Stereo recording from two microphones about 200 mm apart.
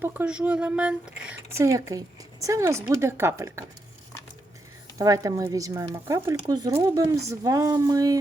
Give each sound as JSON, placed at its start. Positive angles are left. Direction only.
{"t": 0.0, "sound": "speech", "side_deg": -10}
{"t": 4.9, "sound": "speech", "side_deg": -15}